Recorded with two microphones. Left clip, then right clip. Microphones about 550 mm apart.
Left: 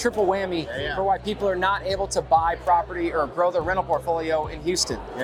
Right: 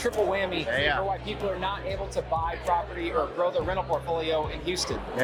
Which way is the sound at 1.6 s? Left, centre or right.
Left.